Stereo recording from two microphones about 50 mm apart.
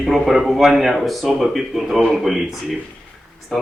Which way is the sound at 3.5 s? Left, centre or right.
Centre.